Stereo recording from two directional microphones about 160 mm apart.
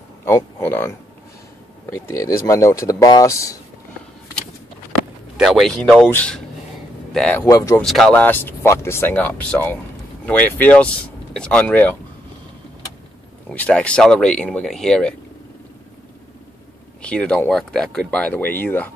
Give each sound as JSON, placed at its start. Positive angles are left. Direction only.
{"t": 0.2, "sound": "speech", "side_deg": 15}
{"t": 5.4, "sound": "speech", "side_deg": 0}
{"t": 7.4, "sound": "speech", "side_deg": 20}
{"t": 7.8, "sound": "speech", "side_deg": 0}
{"t": 13.5, "sound": "speech", "side_deg": 5}
{"t": 17.0, "sound": "speech", "side_deg": 5}